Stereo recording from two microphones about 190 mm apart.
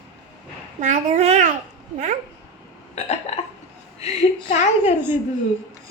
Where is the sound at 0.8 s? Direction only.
40° right (ahead or behind).